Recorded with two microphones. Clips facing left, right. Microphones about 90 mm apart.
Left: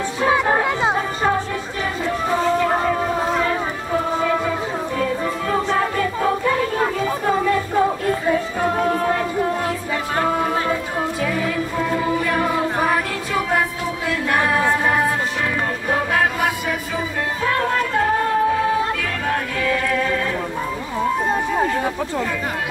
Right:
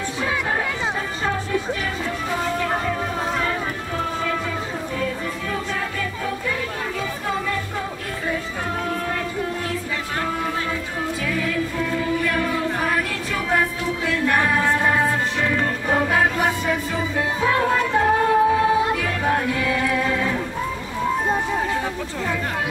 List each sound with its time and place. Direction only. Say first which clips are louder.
0.2 s chatter: left 7 dB; 40° left (ahead or behind)
2.6 s a sound: left 5 dB; 25° left (ahead or behind)
5.5 s music: left 9 dB; 40° left (ahead or behind)
8.7 s music: left 5 dB; 40° left (ahead or behind); by 15.0 s 10° left (ahead or behind)
15.9 s music: even; centre (ahead or behind)